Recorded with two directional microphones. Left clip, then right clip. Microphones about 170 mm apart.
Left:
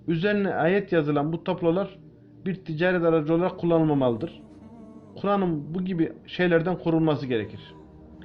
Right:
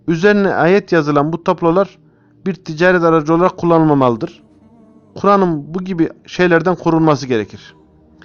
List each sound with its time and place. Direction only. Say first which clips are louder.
0.0 s speech: right 12 dB; 55° right (ahead or behind)
5.4 s speech: right 11 dB; 50° right (ahead or behind)